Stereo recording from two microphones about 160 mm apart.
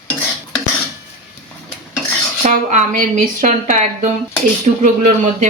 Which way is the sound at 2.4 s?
50° right (ahead or behind).